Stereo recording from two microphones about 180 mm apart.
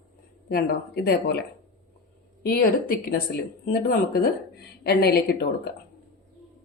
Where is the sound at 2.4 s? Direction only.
55° left (ahead or behind).